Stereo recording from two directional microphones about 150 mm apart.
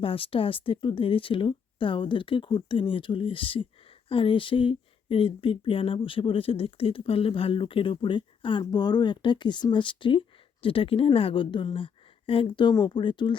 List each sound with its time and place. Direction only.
0.0 s speech: 35° left (ahead or behind)